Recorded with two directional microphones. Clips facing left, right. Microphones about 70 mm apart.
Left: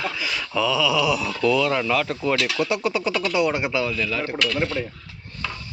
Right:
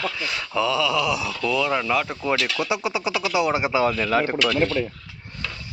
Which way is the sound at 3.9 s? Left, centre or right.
Right.